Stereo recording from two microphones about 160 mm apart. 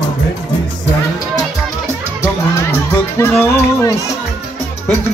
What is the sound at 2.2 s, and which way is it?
Music, 15° left (ahead or behind).